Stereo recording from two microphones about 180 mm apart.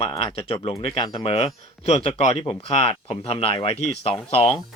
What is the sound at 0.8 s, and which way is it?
Speech, 30° left (ahead or behind).